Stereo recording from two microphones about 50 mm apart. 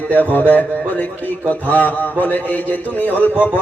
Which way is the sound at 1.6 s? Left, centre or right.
Left.